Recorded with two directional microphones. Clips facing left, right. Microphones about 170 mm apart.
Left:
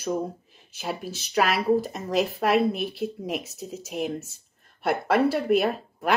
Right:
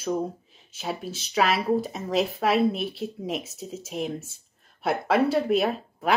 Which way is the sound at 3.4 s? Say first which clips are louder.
Even; 25° right (ahead or behind).